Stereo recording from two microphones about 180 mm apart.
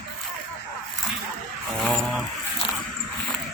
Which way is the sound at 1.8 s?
Centre (ahead or behind).